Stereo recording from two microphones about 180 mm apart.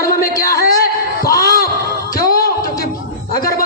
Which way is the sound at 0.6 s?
55° left (ahead or behind).